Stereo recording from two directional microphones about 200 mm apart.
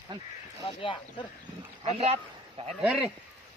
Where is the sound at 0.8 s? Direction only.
25° left (ahead or behind).